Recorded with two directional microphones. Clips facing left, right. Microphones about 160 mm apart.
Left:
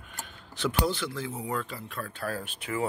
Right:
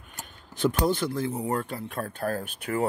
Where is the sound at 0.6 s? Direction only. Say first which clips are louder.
Right 4 dB; 45° right (ahead or behind).